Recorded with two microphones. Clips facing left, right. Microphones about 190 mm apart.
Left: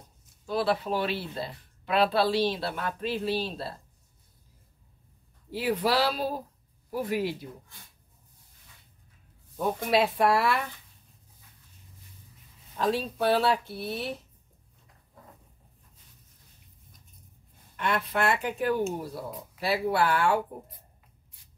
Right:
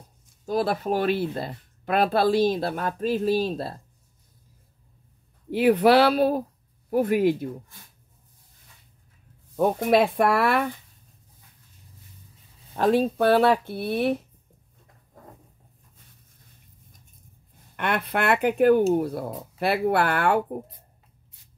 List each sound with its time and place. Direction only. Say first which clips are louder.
0.5 s speech: right 3 dB; 45° right (ahead or behind)
5.5 s speech: right 9 dB; 60° right (ahead or behind)
9.6 s speech: right 5 dB; 55° right (ahead or behind)
12.7 s speech: right 7 dB; 55° right (ahead or behind)
17.7 s speech: right 2 dB; 60° right (ahead or behind)